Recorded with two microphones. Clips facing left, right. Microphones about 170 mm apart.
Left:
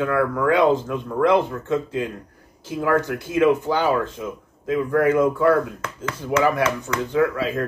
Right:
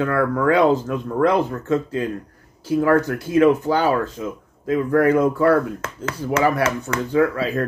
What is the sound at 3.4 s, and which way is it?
Speech, 45° right (ahead or behind).